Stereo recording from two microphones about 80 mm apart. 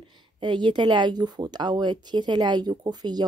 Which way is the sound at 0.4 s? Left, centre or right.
Right.